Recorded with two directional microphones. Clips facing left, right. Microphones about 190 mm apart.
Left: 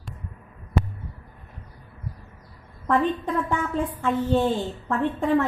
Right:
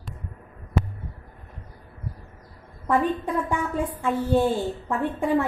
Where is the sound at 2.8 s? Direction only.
10° right (ahead or behind).